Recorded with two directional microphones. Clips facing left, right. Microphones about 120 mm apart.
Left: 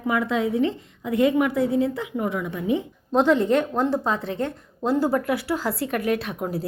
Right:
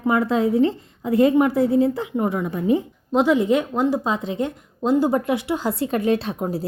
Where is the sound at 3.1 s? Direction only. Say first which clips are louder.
Right 1 dB; 10° right (ahead or behind).